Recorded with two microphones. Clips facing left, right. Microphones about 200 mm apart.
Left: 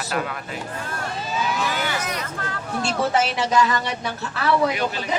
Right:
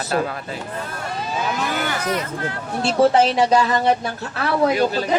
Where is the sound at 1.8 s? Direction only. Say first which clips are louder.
Right 4 dB; 50° right (ahead or behind).